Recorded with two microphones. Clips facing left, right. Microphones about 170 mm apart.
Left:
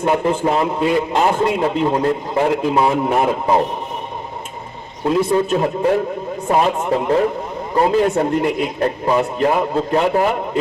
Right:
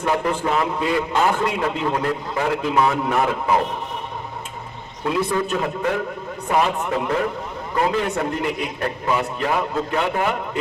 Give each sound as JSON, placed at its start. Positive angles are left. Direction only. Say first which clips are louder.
{"t": 0.0, "sound": "a man's voice", "louder": "left 5 dB", "side_deg": 25}
{"t": 5.0, "sound": "a man's voice", "louder": "left 6 dB", "side_deg": 30}